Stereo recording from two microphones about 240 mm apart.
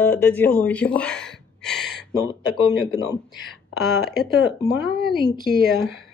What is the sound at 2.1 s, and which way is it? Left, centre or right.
Speech, centre.